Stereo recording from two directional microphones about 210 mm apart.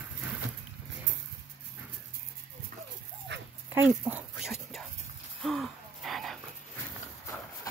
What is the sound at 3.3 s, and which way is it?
Dog, 55° right (ahead or behind).